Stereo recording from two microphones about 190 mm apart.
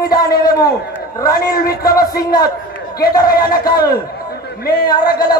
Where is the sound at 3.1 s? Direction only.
20° left (ahead or behind).